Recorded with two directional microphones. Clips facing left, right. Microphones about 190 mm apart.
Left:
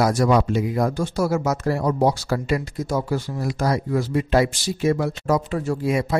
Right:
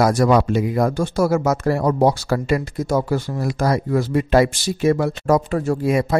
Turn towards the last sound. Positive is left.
turn(degrees=-50)  # may be behind; listen again after turning